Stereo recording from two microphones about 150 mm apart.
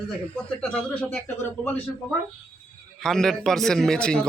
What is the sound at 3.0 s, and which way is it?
A man's voice, 5° left (ahead or behind).